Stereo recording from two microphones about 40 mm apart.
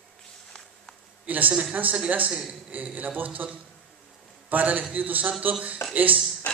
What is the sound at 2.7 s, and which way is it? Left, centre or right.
A man's voice, right.